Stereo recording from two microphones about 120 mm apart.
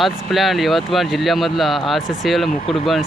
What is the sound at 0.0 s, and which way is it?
Speech, centre (ahead or behind).